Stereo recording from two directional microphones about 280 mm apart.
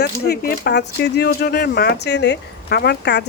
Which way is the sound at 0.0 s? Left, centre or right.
Left.